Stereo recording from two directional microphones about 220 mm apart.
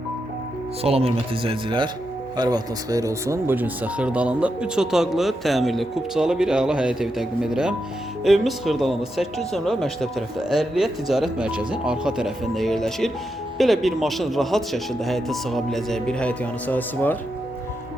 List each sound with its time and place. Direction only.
0.8 s speech: 25° right (ahead or behind); by 17.2 s 10° left (ahead or behind)